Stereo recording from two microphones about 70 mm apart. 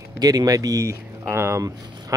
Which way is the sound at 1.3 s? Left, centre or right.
Right.